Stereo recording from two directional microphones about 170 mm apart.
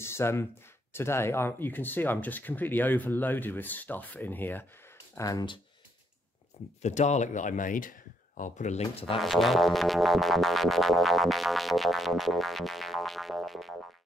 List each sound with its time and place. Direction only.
0.0 s a sound: 15° left (ahead or behind)
0.9 s speech: 15° left (ahead or behind)
6.8 s speech: 45° left (ahead or behind)
9.2 s music: centre (ahead or behind)